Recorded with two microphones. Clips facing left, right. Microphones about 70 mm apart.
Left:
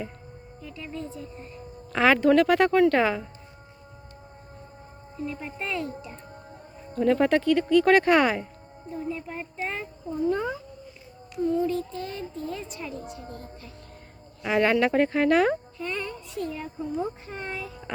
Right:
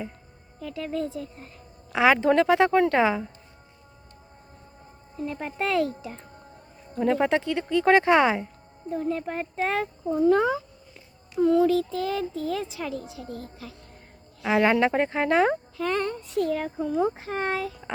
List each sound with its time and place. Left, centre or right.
0.6 s a child's voice: right
1.9 s a woman's voice: centre
5.2 s speech: right
5.6 s speech: right
6.9 s a woman's voice: centre
8.9 s a woman's voice: right
9.6 s speech: right
14.4 s a woman's voice: centre
15.8 s a woman's voice: right
16.4 s a child's voice: right